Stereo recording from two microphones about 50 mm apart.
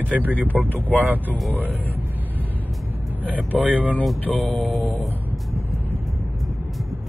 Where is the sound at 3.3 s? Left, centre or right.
Right.